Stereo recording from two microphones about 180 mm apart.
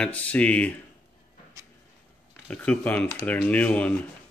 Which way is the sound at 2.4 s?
10° left (ahead or behind).